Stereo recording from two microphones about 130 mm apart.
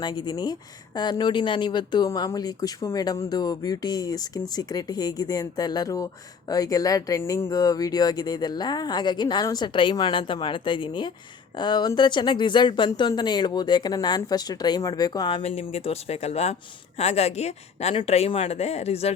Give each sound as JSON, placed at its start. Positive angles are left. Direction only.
{"t": 0.0, "sound": "speech", "side_deg": 35}
{"t": 15.4, "sound": "a woman's voice", "side_deg": 55}